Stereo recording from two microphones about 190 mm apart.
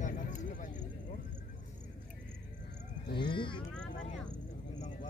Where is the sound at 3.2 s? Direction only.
25° left (ahead or behind).